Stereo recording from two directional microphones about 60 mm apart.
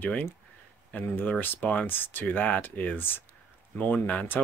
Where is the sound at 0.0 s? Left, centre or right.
Left.